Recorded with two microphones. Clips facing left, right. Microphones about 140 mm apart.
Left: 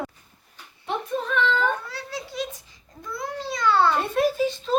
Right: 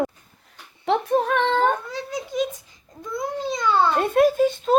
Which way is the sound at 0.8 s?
65° right (ahead or behind).